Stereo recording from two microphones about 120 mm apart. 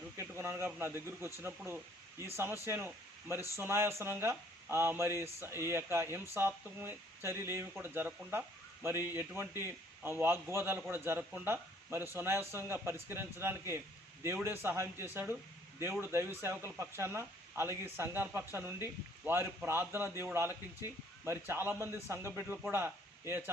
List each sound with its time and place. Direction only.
0.2 s a man's voice: 20° right (ahead or behind)